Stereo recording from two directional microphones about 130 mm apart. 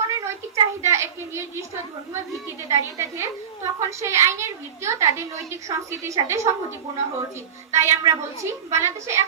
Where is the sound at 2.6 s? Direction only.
25° right (ahead or behind).